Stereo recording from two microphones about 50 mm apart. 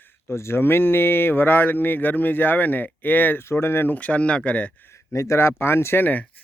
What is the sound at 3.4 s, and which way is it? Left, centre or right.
Speech, left.